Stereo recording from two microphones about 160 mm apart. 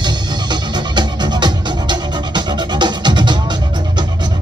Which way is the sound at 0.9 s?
30° right (ahead or behind).